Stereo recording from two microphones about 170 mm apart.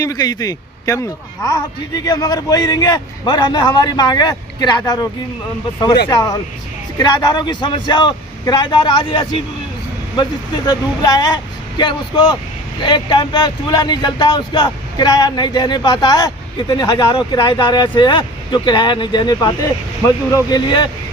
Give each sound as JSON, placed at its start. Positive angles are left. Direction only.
{"t": 0.0, "sound": "speech", "side_deg": 25}
{"t": 6.1, "sound": "speech", "side_deg": 25}